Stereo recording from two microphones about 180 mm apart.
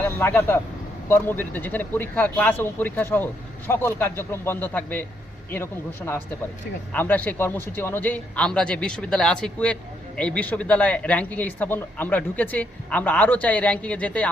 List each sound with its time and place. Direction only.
0.0 s speech: 10° left (ahead or behind)
6.9 s speech: 10° left (ahead or behind)